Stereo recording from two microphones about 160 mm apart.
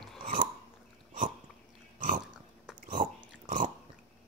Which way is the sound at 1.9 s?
55° right (ahead or behind).